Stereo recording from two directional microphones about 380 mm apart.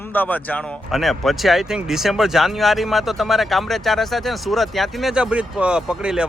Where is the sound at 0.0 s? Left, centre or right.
Centre.